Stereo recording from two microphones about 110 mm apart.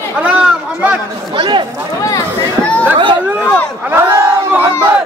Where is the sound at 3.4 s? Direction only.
15° left (ahead or behind).